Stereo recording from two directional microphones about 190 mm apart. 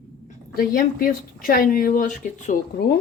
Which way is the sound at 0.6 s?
50° left (ahead or behind).